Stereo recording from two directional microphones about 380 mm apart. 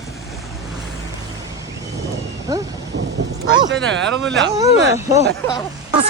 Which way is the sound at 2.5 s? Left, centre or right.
Centre.